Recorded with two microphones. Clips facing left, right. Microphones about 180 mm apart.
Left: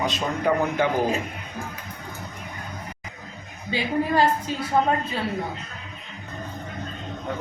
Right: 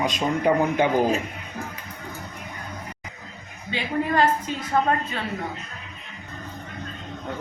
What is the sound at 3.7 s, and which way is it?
Speech, 35° left (ahead or behind).